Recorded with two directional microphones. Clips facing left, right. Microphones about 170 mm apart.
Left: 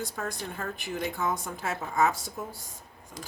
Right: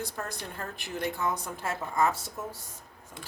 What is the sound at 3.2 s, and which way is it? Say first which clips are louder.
Keys jangling: left 3 dB; 40° left (ahead or behind).